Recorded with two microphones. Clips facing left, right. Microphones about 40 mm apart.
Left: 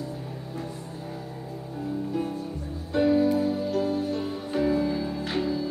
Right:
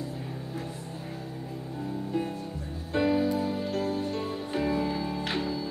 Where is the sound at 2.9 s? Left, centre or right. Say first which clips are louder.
Left 4 dB; right.